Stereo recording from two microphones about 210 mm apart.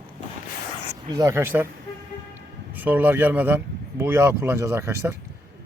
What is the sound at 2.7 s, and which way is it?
Speech, 10° right (ahead or behind).